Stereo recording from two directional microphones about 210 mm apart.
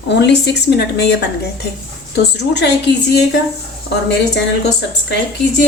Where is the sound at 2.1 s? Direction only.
55° left (ahead or behind).